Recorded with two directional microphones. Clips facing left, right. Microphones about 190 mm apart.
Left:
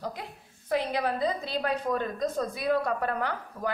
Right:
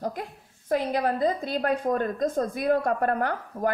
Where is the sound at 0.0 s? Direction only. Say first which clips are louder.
Right 5 dB; 45° right (ahead or behind).